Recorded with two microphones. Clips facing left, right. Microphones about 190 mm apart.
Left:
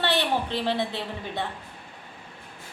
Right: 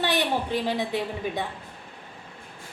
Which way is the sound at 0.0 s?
15° right (ahead or behind).